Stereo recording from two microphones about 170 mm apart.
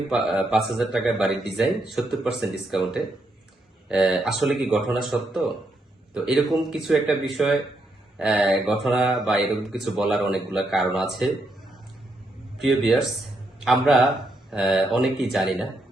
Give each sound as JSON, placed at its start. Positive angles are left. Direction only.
{"t": 0.1, "sound": "speech", "side_deg": -5}
{"t": 12.5, "sound": "speech", "side_deg": 0}